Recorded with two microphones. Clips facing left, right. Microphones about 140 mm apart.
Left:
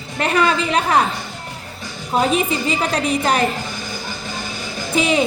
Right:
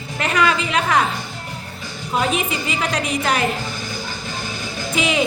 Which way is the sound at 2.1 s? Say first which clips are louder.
Left 3 dB; 35° left (ahead or behind).